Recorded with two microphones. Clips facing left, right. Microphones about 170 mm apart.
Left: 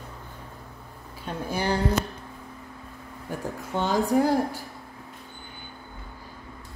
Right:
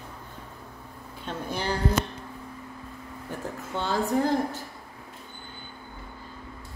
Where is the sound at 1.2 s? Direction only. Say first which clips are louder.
Left 3 dB; 10° left (ahead or behind).